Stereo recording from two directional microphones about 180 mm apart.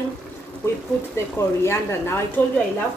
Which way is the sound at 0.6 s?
15° left (ahead or behind).